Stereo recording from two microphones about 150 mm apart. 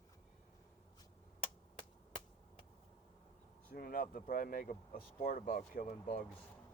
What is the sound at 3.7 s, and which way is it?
Speech, 70° left (ahead or behind).